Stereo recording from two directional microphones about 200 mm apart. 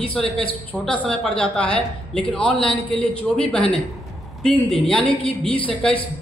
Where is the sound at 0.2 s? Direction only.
Centre (ahead or behind).